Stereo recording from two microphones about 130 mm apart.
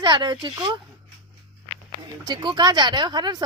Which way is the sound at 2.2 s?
35° right (ahead or behind).